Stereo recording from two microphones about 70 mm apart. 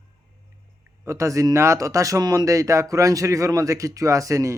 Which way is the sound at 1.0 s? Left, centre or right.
Right.